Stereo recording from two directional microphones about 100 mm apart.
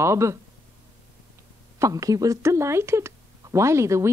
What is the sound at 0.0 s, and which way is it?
Speech, 30° right (ahead or behind).